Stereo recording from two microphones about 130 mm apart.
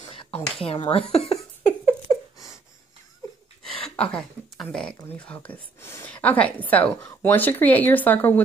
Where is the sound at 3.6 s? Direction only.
5° left (ahead or behind).